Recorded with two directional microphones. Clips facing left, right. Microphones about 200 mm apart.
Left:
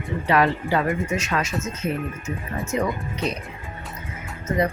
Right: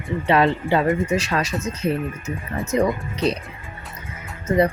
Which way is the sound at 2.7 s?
35° right (ahead or behind).